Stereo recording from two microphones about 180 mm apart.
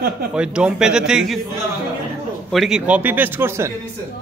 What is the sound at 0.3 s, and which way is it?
Speech, 5° right (ahead or behind).